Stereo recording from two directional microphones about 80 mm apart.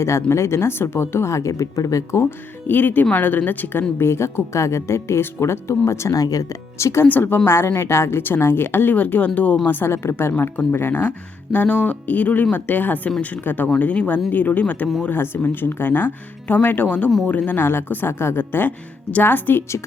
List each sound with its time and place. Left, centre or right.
0.3 s speech: left
2.6 s a woman's voice: left
6.2 s speech: left
6.7 s speech: left
7.1 s a woman's voice: left